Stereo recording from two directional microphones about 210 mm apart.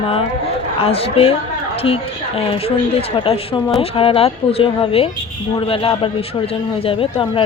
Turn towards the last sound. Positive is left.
turn(degrees=25)  # may be behind; listen again after turning